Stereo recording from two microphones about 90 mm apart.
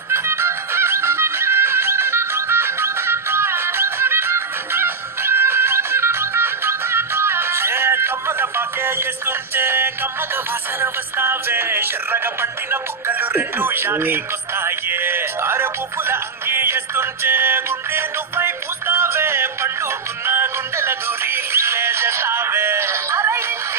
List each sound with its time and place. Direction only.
0.1 s music: 30° right (ahead or behind)